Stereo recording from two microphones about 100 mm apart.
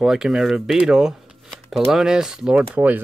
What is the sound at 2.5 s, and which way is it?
Speech, 15° right (ahead or behind).